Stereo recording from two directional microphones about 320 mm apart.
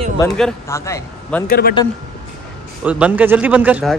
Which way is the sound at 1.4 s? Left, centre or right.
Left.